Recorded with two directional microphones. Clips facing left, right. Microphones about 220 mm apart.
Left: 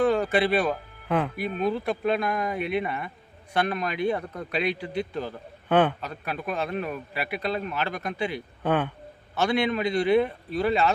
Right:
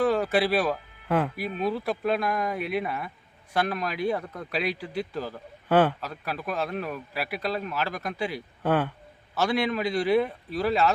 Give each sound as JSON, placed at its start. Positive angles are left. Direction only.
{"t": 0.0, "sound": "a man's voice", "side_deg": 0}